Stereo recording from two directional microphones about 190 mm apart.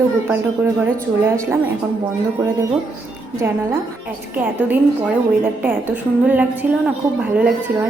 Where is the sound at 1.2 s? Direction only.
10° right (ahead or behind).